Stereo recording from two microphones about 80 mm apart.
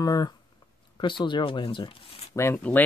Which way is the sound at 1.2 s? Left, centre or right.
Left.